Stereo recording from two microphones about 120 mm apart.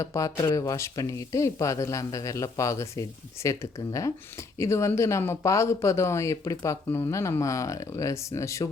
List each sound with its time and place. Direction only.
0.0 s speech: 25° left (ahead or behind)